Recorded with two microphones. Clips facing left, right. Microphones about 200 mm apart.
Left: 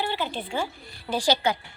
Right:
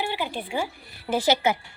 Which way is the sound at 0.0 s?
10° right (ahead or behind).